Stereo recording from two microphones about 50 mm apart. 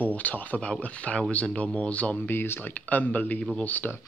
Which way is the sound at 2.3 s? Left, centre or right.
Left.